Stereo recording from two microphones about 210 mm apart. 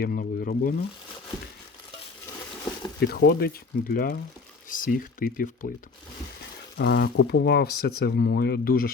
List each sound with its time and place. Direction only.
0.0 s speech: 45° left (ahead or behind)
3.0 s speech: 50° left (ahead or behind)
6.7 s speech: 50° left (ahead or behind)